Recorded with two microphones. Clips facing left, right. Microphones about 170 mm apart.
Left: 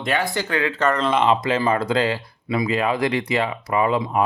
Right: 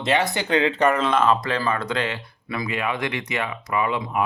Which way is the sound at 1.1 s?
20° left (ahead or behind).